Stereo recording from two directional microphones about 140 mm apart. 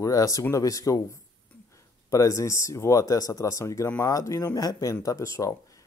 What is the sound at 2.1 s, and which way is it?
Speech, 20° left (ahead or behind).